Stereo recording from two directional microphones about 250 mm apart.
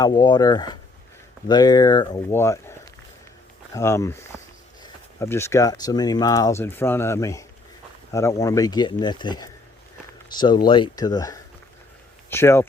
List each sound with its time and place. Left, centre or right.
0.0 s speech: centre
3.8 s speech: centre